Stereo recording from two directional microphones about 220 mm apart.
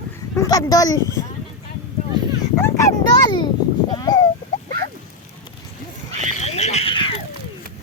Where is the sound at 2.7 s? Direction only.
15° left (ahead or behind).